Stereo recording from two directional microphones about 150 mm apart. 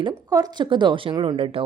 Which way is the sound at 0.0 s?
25° right (ahead or behind).